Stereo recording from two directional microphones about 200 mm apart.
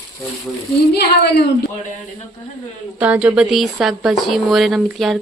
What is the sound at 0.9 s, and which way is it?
Speech, 55° left (ahead or behind).